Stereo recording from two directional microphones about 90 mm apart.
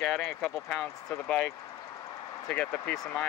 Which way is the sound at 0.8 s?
30° left (ahead or behind).